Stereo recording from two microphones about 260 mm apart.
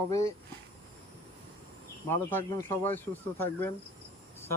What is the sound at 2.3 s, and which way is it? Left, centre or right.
Speech, centre.